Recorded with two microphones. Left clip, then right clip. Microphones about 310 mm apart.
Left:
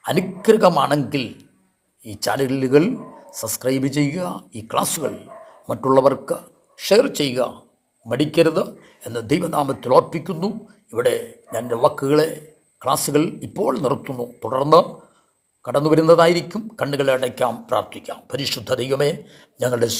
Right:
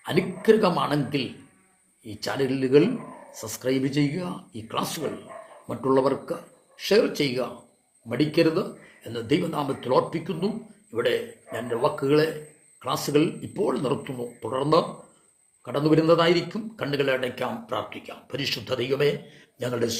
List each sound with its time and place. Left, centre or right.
0.0 s speech: left